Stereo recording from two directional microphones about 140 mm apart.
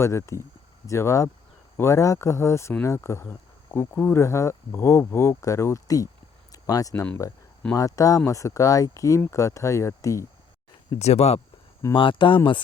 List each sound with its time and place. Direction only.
0.0 s speech: 20° left (ahead or behind)
6.5 s a sound: 25° left (ahead or behind)
7.8 s speech: 25° left (ahead or behind)
11.0 s speech: 50° left (ahead or behind)
11.9 s speech: 35° left (ahead or behind)